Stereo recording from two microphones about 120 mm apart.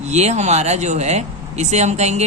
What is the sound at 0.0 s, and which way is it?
A man's voice, 65° right (ahead or behind).